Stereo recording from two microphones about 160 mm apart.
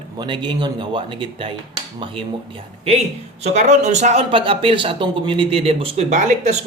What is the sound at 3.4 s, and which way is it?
Speech, 45° right (ahead or behind).